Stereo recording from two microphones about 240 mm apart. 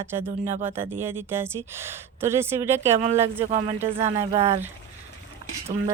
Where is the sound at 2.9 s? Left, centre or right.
Right.